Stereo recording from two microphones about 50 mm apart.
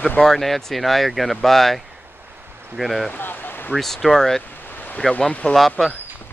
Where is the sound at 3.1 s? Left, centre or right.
Left.